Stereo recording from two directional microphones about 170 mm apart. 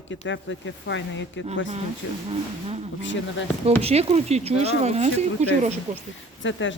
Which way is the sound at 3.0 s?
90° left.